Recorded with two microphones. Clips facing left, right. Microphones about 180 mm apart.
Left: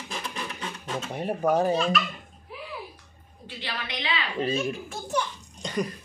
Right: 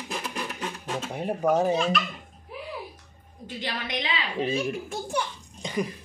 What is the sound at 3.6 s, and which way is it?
Speech, 40° right (ahead or behind).